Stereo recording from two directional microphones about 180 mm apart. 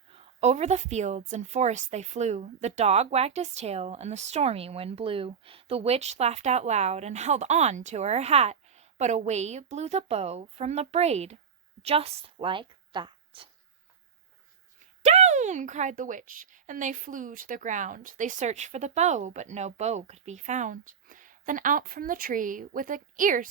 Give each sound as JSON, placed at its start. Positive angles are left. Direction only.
{"t": 0.1, "sound": "a woman's voice", "side_deg": -35}
{"t": 15.0, "sound": "a woman's voice", "side_deg": -40}